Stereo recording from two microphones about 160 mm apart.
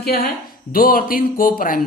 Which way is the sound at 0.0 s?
75° left (ahead or behind).